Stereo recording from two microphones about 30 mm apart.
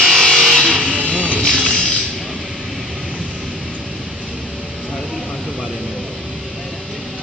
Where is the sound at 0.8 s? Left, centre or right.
Right.